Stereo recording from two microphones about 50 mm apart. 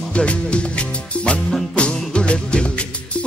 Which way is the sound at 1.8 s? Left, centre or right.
Left.